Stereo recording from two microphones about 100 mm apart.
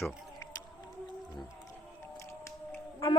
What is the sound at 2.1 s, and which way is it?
Music, 30° left (ahead or behind).